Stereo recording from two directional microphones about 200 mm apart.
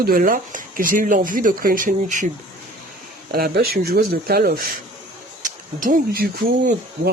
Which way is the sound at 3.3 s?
50° right (ahead or behind).